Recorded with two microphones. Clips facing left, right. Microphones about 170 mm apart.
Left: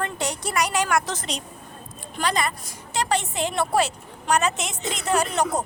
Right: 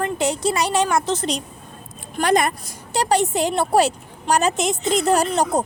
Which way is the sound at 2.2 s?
50° right (ahead or behind).